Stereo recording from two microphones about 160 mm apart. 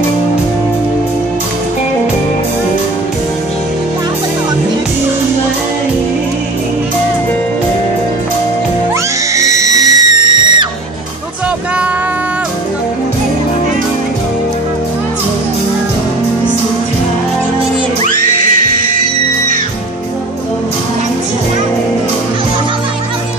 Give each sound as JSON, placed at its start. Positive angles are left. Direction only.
{"t": 9.3, "sound": "music", "side_deg": -20}
{"t": 18.4, "sound": "music", "side_deg": -55}